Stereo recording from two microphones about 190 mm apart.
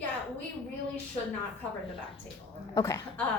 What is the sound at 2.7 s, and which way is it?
Speech, 15° left (ahead or behind).